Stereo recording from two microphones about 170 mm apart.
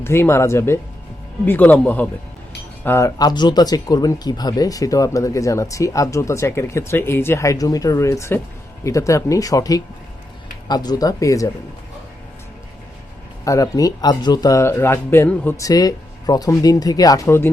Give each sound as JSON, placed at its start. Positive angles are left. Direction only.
{"t": 0.0, "sound": "speech", "side_deg": 15}
{"t": 13.4, "sound": "speech", "side_deg": 20}